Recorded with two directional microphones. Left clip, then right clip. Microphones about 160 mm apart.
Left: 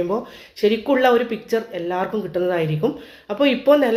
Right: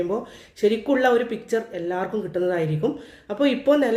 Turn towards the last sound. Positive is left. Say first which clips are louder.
# left 4 dB
turn(degrees=-25)  # may be behind; listen again after turning